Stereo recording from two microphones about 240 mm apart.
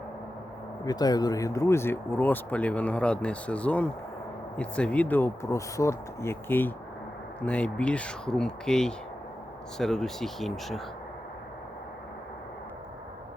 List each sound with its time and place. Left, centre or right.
0.9 s speech: centre